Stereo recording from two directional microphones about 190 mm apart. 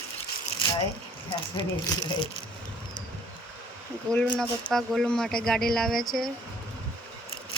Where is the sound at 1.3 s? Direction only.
25° left (ahead or behind).